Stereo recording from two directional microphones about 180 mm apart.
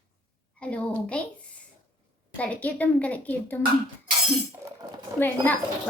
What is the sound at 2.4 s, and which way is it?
Speech, 10° left (ahead or behind).